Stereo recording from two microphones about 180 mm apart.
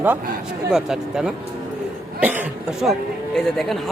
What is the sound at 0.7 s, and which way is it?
Speech, 5° right (ahead or behind).